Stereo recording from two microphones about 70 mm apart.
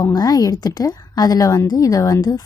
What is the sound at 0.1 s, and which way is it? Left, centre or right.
A woman's voice, left.